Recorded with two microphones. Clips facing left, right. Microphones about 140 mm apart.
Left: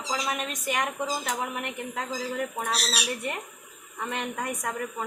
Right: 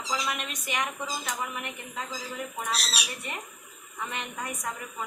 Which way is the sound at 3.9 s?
50° left (ahead or behind).